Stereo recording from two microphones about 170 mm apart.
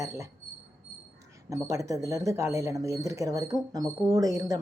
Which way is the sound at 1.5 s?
20° right (ahead or behind).